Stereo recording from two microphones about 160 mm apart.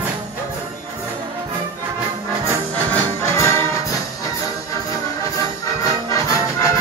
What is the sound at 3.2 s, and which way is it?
Music, 15° left (ahead or behind).